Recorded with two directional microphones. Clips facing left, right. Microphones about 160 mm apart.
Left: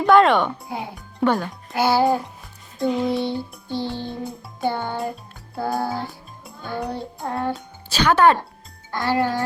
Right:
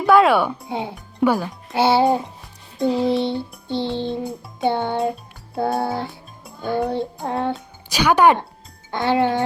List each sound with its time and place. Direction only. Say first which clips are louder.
0.0 s speech: even; 5° right (ahead or behind)
0.7 s music: right 4 dB; 25° right (ahead or behind)
1.2 s a woman's voice: right 2 dB; 10° right (ahead or behind)
1.7 s music: right 2 dB; 25° right (ahead or behind)
6.1 s music: right 1 dB; centre (ahead or behind)
7.3 s music: right 1 dB; 20° right (ahead or behind)
7.9 s a woman's voice: right 1 dB; 15° right (ahead or behind)
8.9 s music: right 3 dB; 20° right (ahead or behind)